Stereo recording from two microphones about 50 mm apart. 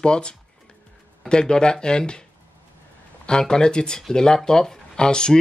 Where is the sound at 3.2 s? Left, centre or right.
Centre.